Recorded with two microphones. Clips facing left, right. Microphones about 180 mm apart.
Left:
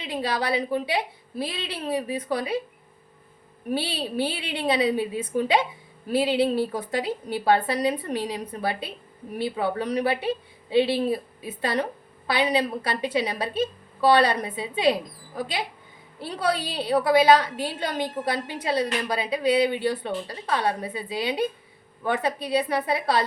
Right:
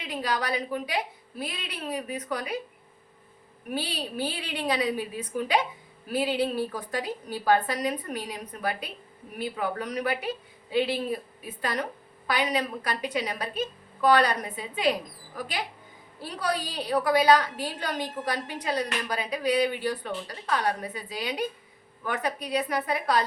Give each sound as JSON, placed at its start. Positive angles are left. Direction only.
{"t": 0.0, "sound": "a woman's voice", "side_deg": 25}
{"t": 3.7, "sound": "a woman's voice", "side_deg": 25}